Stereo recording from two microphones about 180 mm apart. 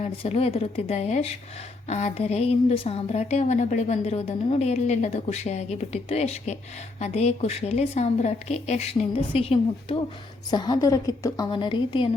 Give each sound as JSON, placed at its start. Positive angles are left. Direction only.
{"t": 0.0, "sound": "a woman's voice", "side_deg": 35}